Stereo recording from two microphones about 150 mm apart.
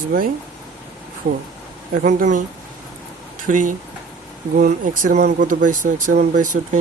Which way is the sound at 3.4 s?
60° right (ahead or behind).